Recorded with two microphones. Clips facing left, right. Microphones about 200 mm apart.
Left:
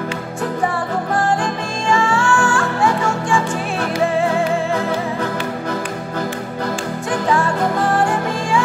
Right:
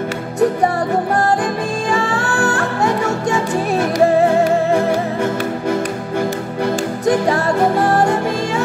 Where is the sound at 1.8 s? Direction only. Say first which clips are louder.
Left 5 dB; 35° right (ahead or behind).